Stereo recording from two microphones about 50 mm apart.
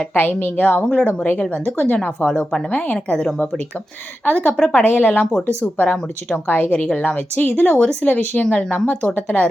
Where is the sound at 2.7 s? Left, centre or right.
Left.